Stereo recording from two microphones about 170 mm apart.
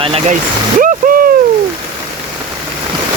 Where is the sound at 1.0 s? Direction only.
55° right (ahead or behind).